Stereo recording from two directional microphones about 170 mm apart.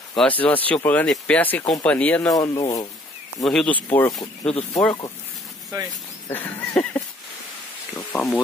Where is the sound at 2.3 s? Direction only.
20° left (ahead or behind).